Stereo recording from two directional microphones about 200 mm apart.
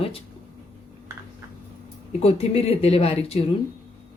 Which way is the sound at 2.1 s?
30° left (ahead or behind).